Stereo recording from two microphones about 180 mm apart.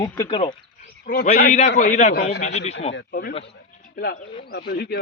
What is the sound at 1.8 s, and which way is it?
Speech, 40° left (ahead or behind).